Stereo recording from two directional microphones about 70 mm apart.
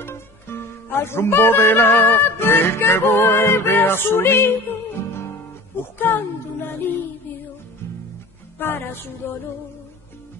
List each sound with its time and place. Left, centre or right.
0.0 s speech: left
5.8 s child singing: left
8.5 s a sound: left